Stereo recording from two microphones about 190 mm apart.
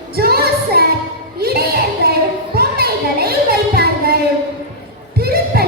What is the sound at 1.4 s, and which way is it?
Music, 55° right (ahead or behind).